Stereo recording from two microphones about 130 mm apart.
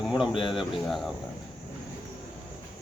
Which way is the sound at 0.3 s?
40° left (ahead or behind).